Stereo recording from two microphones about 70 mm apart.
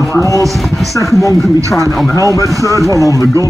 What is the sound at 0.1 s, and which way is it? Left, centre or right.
Speech, left.